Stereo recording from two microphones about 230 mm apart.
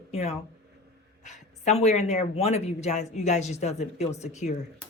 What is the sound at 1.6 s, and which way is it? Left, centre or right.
Speech, left.